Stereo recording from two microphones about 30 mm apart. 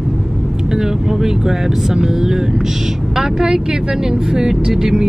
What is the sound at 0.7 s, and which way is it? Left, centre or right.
Speech, centre.